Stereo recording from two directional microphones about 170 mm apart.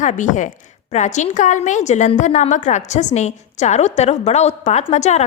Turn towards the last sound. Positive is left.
turn(degrees=40)  # may be behind; listen again after turning